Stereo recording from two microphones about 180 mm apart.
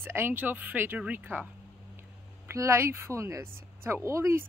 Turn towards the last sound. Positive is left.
turn(degrees=-15)  # may be behind; listen again after turning